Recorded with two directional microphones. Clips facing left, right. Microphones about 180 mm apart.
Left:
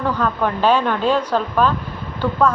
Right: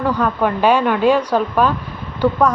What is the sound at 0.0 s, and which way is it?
A woman's voice, 10° right (ahead or behind).